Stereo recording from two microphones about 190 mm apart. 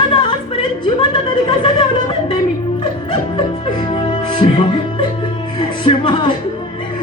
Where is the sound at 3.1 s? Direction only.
25° left (ahead or behind).